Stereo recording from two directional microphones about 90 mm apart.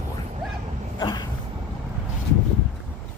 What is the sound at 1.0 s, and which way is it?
Dog, 55° left (ahead or behind).